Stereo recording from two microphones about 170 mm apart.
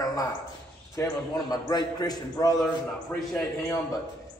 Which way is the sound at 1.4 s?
25° left (ahead or behind).